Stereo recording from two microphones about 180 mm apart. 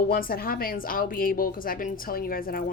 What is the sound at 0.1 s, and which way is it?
Speech, 55° left (ahead or behind).